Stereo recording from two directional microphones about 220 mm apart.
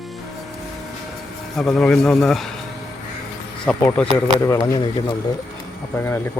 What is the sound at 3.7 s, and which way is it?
Speech, 5° left (ahead or behind).